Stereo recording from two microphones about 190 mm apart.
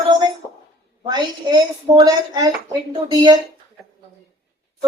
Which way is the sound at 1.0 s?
20° right (ahead or behind).